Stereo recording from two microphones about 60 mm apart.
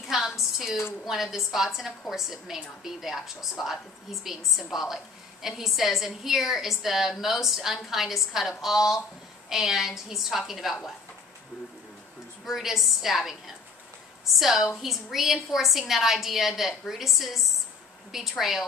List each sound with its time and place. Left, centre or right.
0.1 s a sound: centre
1.0 s a woman's voice: centre
12.4 s a woman's voice: centre